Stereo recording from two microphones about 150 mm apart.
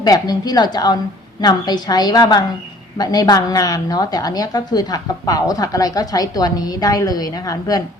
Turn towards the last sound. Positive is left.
turn(degrees=25)  # may be behind; listen again after turning